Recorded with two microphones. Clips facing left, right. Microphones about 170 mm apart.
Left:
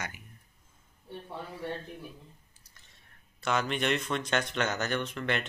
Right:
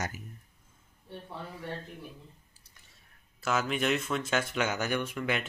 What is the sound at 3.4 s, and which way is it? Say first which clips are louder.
Speech: even; 5° right (ahead or behind).